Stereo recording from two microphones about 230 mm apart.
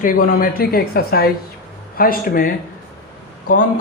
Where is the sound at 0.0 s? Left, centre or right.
Left.